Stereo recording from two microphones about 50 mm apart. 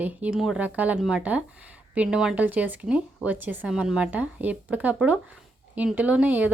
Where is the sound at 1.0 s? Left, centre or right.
Centre; by 3.7 s right.